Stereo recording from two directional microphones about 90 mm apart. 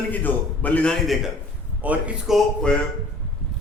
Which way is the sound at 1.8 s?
20° right (ahead or behind).